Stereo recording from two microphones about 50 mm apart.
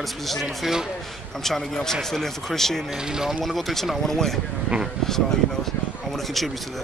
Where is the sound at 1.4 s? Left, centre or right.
Centre.